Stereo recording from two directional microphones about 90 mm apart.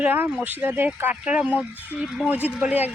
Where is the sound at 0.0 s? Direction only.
20° right (ahead or behind).